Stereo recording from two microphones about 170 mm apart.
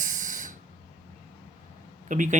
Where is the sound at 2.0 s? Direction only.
50° right (ahead or behind).